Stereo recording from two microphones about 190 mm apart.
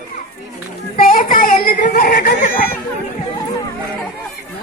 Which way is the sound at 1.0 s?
45° left (ahead or behind).